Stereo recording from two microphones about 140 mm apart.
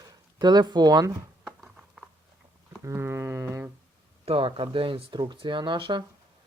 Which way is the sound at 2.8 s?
20° right (ahead or behind).